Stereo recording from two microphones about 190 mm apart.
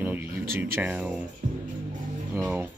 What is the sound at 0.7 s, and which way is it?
Speech, 10° right (ahead or behind).